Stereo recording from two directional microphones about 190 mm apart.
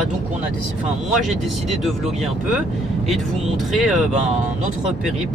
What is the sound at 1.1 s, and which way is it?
Speech, centre (ahead or behind).